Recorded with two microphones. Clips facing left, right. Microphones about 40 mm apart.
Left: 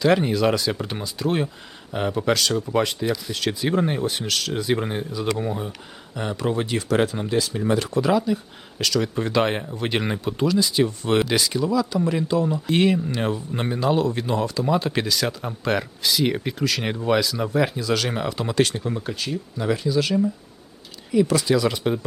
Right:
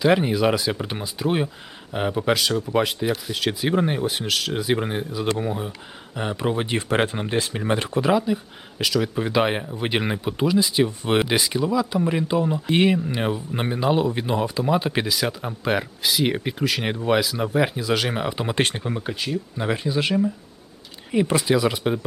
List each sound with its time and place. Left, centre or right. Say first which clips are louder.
0.0 s speech: even; centre
6.1 s speech: even; centre
18.8 s speech: even; centre
19.5 s speech: left 3 dB; right; by 22.0 s centre